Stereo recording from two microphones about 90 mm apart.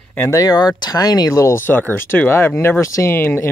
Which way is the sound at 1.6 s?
20° left (ahead or behind).